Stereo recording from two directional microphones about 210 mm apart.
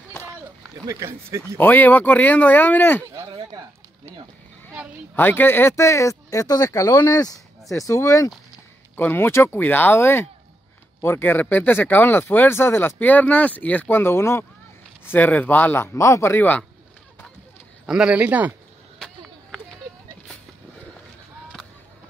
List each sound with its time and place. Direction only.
0.8 s speech: 15° right (ahead or behind)
1.6 s speech: 10° left (ahead or behind)
3.1 s speech: 20° right (ahead or behind)
5.1 s speech: 10° left (ahead or behind)
17.8 s speech: 5° right (ahead or behind)
18.9 s a sound: centre (ahead or behind)